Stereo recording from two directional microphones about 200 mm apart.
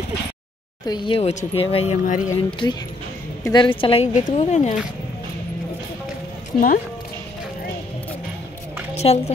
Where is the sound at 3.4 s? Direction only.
25° left (ahead or behind).